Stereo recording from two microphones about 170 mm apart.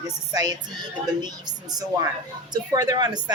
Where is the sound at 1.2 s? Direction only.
25° right (ahead or behind).